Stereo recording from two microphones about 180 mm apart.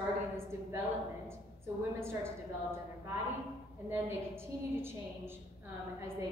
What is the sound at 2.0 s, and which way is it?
Speech, 15° right (ahead or behind).